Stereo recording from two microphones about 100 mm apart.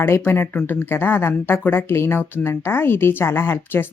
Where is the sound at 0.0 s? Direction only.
20° left (ahead or behind).